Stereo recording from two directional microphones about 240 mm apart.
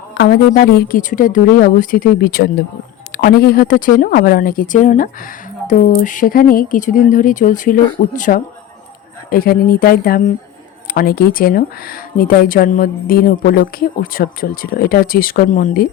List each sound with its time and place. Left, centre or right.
0.1 s speech: left